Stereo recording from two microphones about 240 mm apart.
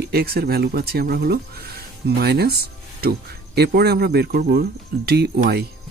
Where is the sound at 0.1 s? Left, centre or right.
Right.